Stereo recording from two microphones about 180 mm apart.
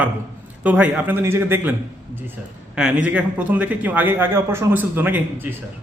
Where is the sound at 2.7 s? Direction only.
5° right (ahead or behind).